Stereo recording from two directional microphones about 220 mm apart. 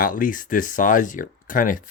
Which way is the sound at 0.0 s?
40° left (ahead or behind).